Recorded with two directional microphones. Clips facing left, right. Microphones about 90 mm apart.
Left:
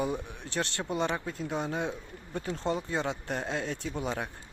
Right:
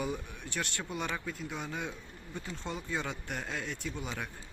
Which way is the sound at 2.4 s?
45° left (ahead or behind).